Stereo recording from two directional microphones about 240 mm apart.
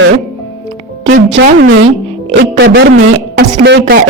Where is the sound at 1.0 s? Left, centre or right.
Right.